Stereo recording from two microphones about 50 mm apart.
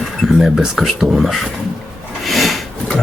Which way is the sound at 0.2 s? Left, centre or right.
Centre.